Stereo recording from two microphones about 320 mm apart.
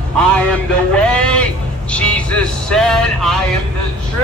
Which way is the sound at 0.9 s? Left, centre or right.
Centre.